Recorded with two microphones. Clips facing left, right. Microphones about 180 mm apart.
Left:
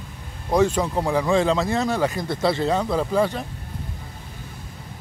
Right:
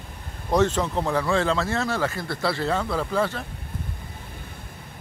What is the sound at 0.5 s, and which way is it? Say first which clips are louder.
Speech: left 2 dB; 10° left (ahead or behind).